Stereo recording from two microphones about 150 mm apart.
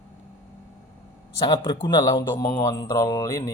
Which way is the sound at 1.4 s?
30° left (ahead or behind).